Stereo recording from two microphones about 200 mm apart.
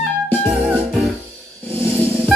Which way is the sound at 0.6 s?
Centre (ahead or behind).